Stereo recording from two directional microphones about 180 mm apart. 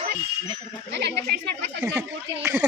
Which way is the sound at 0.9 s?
70° right (ahead or behind).